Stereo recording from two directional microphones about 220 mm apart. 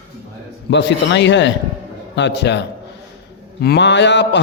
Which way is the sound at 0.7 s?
55° left (ahead or behind).